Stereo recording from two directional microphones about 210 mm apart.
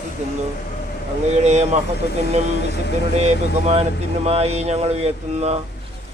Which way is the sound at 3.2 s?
30° right (ahead or behind).